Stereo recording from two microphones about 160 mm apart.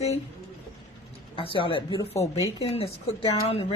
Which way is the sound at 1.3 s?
35° left (ahead or behind).